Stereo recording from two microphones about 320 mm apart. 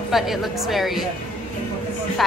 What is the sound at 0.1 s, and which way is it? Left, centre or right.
Speech, centre.